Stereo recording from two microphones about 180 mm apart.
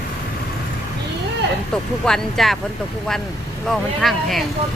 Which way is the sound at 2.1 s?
Centre (ahead or behind).